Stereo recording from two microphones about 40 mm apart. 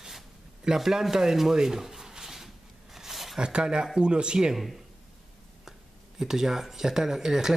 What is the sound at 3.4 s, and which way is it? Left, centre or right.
Speech, right.